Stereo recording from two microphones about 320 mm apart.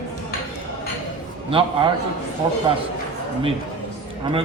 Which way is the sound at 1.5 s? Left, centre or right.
Centre.